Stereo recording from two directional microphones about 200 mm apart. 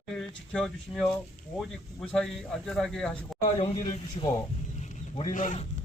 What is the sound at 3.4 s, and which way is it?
Speech, 30° left (ahead or behind).